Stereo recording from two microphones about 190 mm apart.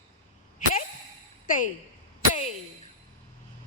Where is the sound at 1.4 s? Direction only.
45° left (ahead or behind).